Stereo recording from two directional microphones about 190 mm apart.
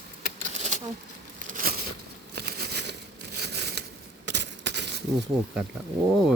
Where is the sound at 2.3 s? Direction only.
60° right (ahead or behind).